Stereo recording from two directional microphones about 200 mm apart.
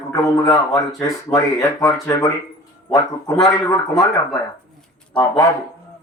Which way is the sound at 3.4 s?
15° left (ahead or behind).